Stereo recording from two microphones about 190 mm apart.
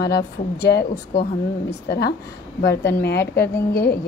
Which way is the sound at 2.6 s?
60° left (ahead or behind).